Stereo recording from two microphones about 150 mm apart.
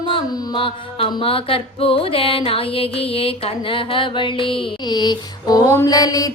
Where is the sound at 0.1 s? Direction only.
35° left (ahead or behind).